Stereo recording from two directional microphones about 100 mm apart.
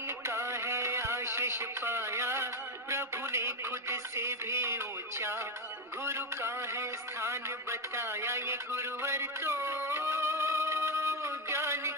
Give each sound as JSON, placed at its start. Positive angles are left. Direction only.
{"t": 0.3, "sound": "a man's voice", "side_deg": -25}